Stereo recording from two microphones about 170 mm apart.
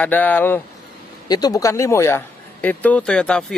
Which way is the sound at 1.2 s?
20° left (ahead or behind).